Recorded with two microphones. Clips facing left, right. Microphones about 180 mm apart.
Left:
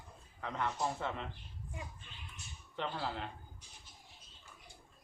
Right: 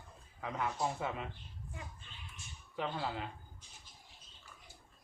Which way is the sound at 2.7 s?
5° right (ahead or behind).